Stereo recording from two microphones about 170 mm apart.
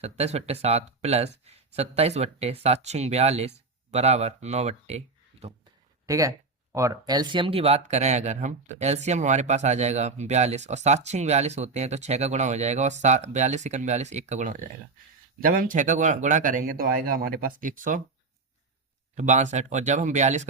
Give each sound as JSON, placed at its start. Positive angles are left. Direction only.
{"t": 0.0, "sound": "speech", "side_deg": -40}
{"t": 6.1, "sound": "speech", "side_deg": -20}
{"t": 19.1, "sound": "speech", "side_deg": -45}